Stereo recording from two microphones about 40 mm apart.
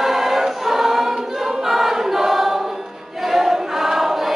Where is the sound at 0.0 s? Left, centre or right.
Centre.